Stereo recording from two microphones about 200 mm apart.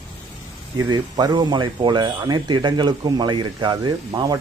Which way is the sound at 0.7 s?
20° right (ahead or behind).